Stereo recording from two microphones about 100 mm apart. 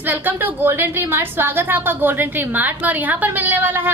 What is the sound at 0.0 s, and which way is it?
A woman's voice, 20° right (ahead or behind).